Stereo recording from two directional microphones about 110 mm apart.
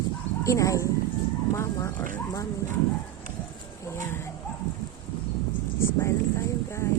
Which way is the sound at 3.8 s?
25° left (ahead or behind).